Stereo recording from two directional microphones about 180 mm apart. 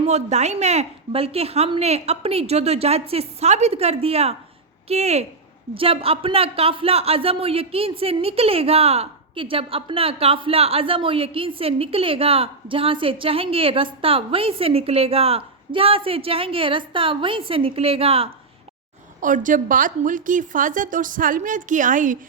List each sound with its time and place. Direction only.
0.0 s a man's voice: 40° right (ahead or behind)
19.2 s a woman's voice: 45° right (ahead or behind)